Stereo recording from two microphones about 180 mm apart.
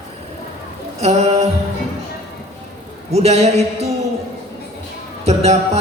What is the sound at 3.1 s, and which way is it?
Speech, 35° right (ahead or behind).